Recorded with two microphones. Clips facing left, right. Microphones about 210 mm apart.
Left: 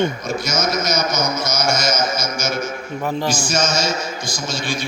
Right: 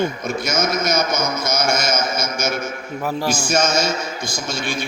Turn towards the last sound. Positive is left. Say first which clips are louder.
# right 1 dB
turn(degrees=-60)  # may be behind; listen again after turning